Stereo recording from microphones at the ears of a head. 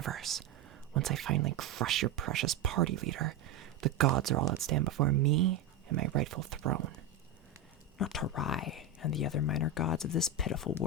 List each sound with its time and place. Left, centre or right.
0.0 s whispering: right
0.9 s speech: right
7.9 s speech: left